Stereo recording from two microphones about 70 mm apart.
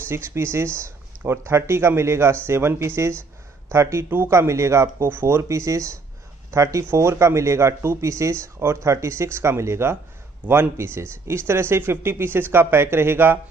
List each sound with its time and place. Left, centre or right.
0.1 s speech: right